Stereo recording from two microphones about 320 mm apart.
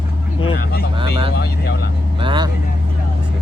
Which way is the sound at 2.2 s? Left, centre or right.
Centre.